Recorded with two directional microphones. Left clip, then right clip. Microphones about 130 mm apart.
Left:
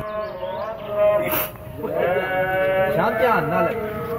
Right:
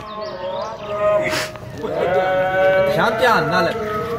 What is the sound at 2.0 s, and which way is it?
Sheep, 25° right (ahead or behind).